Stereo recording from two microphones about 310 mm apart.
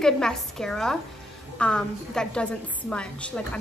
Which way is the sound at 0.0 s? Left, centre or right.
Centre.